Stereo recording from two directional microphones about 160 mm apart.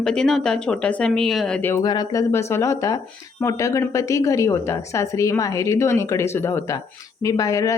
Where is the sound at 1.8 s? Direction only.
25° left (ahead or behind).